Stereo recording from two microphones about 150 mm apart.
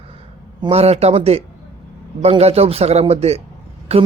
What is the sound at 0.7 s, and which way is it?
A man's voice, 45° right (ahead or behind).